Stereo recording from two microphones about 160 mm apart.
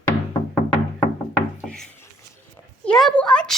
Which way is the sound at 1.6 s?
5° left (ahead or behind).